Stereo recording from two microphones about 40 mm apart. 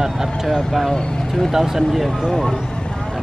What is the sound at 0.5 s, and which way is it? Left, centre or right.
Speech, centre.